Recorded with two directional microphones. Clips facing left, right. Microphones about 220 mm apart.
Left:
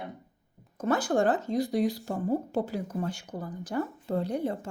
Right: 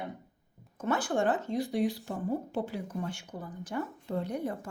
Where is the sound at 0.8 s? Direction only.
40° left (ahead or behind).